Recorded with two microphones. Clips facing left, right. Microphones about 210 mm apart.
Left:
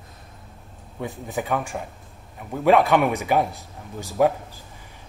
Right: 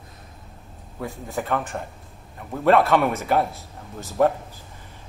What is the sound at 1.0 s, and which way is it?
Speech, centre (ahead or behind).